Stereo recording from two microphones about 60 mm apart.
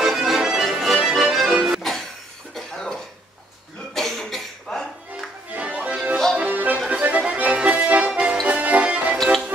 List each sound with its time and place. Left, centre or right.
0.0 s music: centre
1.8 s music: centre
2.5 s cough: centre
5.5 s music: right
6.9 s accordion: right
7.2 s music: centre